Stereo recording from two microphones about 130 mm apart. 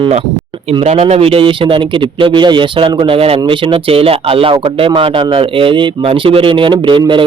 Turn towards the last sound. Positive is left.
turn(degrees=-40)  # may be behind; listen again after turning